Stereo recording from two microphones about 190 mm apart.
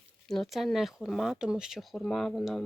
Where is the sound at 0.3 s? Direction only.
Centre (ahead or behind).